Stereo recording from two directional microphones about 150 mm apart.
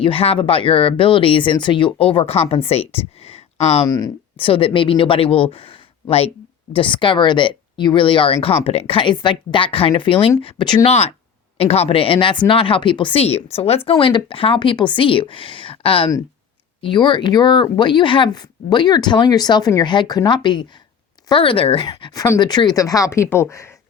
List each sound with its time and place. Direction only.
0.0 s speech: 40° left (ahead or behind)
3.8 s speech: 25° left (ahead or behind)
4.4 s speech: 35° left (ahead or behind)
10.8 s speech: 45° left (ahead or behind)
21.8 s speech: 25° left (ahead or behind)